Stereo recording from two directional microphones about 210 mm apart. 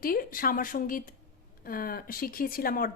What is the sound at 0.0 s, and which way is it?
A woman's voice, 45° left (ahead or behind).